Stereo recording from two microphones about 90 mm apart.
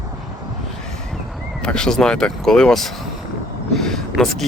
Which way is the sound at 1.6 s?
10° left (ahead or behind).